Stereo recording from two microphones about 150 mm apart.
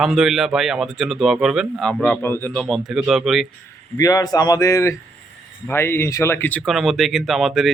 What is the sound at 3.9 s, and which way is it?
Speech, 25° left (ahead or behind).